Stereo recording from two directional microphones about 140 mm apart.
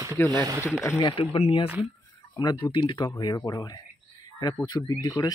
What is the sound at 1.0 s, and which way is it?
Speech, 35° left (ahead or behind).